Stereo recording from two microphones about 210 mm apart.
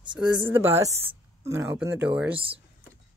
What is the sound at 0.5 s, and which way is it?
Speech, 10° right (ahead or behind).